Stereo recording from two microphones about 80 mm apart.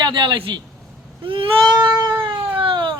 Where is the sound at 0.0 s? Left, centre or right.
Right.